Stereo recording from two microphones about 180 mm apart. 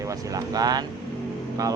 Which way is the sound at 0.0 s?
20° right (ahead or behind).